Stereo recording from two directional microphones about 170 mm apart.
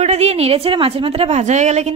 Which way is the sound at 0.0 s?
40° right (ahead or behind).